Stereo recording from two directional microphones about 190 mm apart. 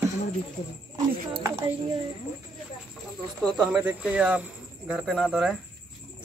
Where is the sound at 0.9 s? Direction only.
20° right (ahead or behind).